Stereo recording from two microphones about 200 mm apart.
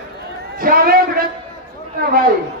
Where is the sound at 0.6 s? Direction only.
45° right (ahead or behind).